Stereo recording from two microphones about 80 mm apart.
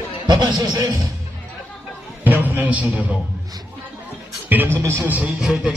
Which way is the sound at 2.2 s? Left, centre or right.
Right.